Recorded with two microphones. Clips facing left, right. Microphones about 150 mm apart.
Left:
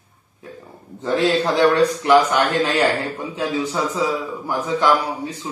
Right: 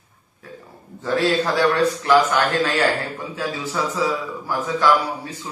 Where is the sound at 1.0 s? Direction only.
20° left (ahead or behind).